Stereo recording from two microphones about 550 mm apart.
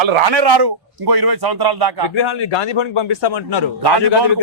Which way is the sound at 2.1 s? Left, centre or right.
Left.